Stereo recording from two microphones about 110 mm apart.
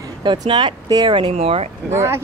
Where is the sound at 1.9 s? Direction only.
25° right (ahead or behind).